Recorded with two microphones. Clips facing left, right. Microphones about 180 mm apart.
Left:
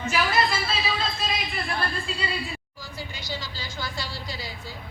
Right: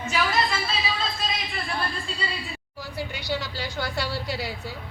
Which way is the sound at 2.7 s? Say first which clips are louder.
Right 5 dB; 65° right (ahead or behind).